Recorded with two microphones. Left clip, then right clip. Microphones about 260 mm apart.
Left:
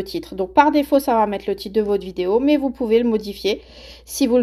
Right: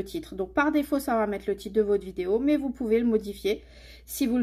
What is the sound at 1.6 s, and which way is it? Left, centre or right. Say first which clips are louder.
Speech: left 4 dB; left.